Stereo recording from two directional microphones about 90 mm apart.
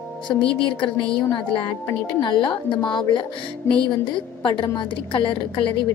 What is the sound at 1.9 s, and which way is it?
A woman's voice, 55° left (ahead or behind).